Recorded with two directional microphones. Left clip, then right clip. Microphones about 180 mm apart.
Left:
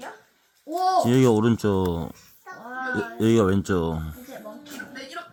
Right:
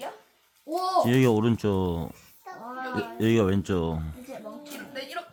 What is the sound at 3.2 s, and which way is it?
Speech, 10° right (ahead or behind).